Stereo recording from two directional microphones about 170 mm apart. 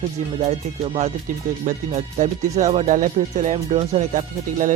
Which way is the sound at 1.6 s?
45° right (ahead or behind).